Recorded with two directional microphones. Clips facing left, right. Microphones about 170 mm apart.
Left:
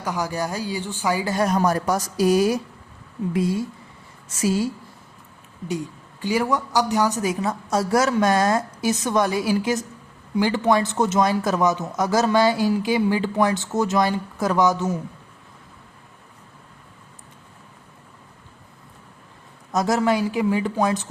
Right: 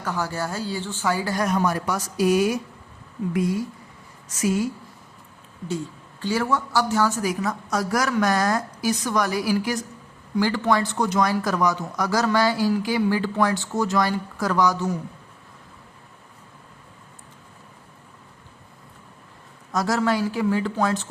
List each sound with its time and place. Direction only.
0.0 s speech: 15° left (ahead or behind)
1.5 s speech: 40° left (ahead or behind)
5.6 s speech: 15° left (ahead or behind)
19.7 s speech: 20° left (ahead or behind)